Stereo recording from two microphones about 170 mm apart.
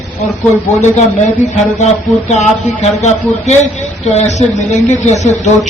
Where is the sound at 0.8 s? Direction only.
45° left (ahead or behind).